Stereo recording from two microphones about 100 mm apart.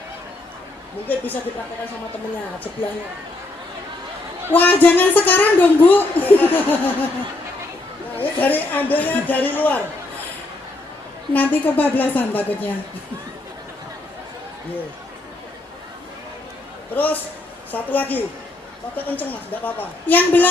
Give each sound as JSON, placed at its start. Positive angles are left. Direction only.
{"t": 1.0, "sound": "a woman's voice", "side_deg": 20}
{"t": 4.5, "sound": "speech", "side_deg": 15}
{"t": 8.1, "sound": "speech", "side_deg": 15}
{"t": 11.3, "sound": "speech", "side_deg": 15}
{"t": 16.9, "sound": "speech", "side_deg": 15}